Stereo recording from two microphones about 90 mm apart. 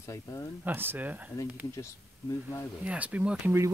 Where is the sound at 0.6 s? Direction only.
25° right (ahead or behind).